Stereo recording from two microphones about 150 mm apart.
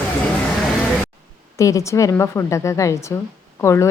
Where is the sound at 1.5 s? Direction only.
20° left (ahead or behind).